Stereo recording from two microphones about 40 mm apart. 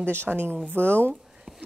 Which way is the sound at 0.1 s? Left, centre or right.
Right.